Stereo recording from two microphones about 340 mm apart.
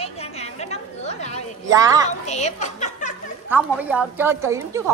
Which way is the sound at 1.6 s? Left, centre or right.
Centre.